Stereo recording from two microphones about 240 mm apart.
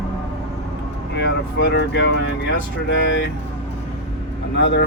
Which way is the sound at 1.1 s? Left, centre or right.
Left.